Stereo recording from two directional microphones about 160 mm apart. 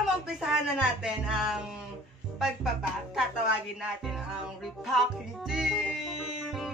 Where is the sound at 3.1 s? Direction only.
5° right (ahead or behind).